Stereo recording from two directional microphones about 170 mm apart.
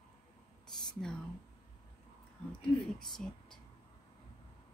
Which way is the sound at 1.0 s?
5° left (ahead or behind).